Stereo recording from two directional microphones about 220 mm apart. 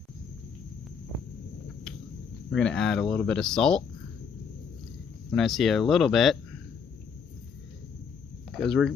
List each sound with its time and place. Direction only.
2.5 s speech: 5° left (ahead or behind)
5.3 s speech: centre (ahead or behind)
8.4 s speech: centre (ahead or behind)